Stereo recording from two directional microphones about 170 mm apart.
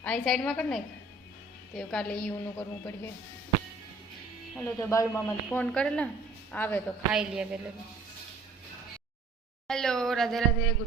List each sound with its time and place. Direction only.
0.0 s a woman's voice: 5° left (ahead or behind)
4.5 s speech: 5° left (ahead or behind)
4.9 s a woman's voice: 15° left (ahead or behind)
7.1 s speech: 5° right (ahead or behind)
9.6 s speech: 5° left (ahead or behind)